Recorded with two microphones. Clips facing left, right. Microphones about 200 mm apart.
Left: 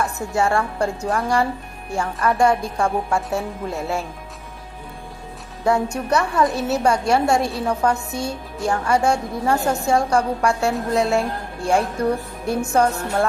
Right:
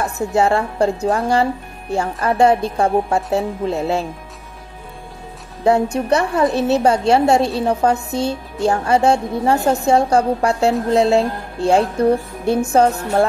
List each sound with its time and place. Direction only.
0.0 s a woman's voice: 30° right (ahead or behind)
6.0 s a woman's voice: 30° right (ahead or behind)